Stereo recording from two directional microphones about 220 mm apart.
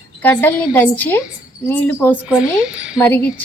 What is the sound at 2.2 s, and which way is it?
Speech, 5° right (ahead or behind).